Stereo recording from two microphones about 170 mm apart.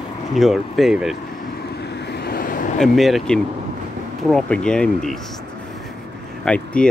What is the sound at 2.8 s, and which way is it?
Speech, centre (ahead or behind).